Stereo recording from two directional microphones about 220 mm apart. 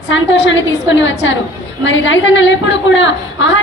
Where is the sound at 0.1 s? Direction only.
60° left (ahead or behind).